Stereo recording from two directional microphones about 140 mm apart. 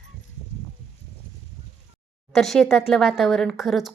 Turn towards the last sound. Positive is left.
turn(degrees=0)  # may be behind; listen again after turning